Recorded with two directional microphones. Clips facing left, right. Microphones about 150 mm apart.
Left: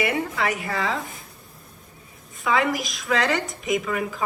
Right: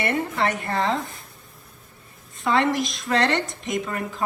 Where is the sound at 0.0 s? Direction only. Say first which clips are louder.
Right 1 dB; centre (ahead or behind).